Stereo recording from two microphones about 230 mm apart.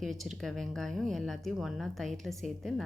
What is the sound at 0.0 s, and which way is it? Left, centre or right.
A woman's voice, centre.